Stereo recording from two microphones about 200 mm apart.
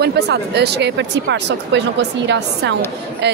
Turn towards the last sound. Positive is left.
turn(degrees=-55)  # may be behind; listen again after turning